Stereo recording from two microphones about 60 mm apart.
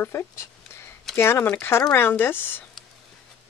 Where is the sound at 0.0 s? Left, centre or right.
Left.